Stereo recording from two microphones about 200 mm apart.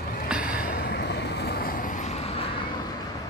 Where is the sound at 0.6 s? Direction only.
50° left (ahead or behind); by 2.6 s 30° left (ahead or behind).